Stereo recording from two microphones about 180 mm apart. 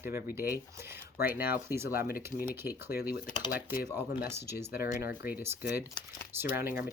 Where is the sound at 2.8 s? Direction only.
60° left (ahead or behind).